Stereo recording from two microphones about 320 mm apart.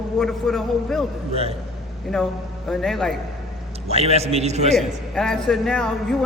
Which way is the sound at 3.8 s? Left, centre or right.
Centre.